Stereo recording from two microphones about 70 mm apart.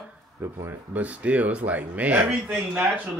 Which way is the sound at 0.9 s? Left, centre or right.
Right.